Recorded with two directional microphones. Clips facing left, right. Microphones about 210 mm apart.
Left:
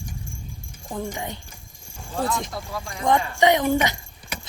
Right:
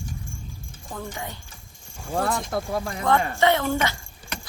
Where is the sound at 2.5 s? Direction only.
55° right (ahead or behind).